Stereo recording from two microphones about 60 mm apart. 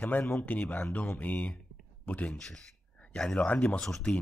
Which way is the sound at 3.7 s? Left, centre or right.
Centre.